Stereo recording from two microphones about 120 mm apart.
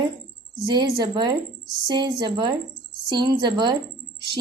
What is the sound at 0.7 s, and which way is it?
Speech, 35° right (ahead or behind).